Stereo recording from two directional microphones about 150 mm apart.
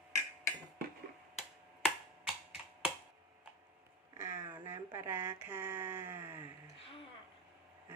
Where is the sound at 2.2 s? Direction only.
5° right (ahead or behind).